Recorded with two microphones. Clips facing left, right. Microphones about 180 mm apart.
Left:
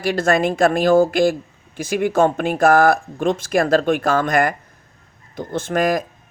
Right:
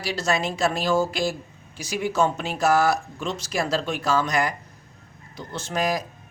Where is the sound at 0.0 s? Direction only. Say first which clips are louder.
Left 8 dB; 55° left (ahead or behind).